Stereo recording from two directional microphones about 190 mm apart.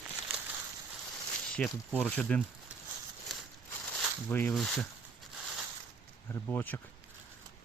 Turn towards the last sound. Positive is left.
turn(degrees=10)  # may be behind; listen again after turning